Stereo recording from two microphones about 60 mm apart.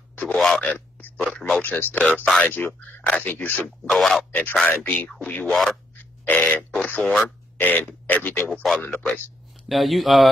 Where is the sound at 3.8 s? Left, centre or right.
Centre.